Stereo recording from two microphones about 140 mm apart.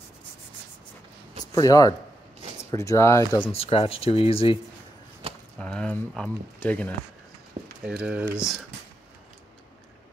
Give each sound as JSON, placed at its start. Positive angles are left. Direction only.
{"t": 1.4, "sound": "speech", "side_deg": 25}
{"t": 3.5, "sound": "speech", "side_deg": 45}
{"t": 5.6, "sound": "speech", "side_deg": 10}
{"t": 7.8, "sound": "speech", "side_deg": -5}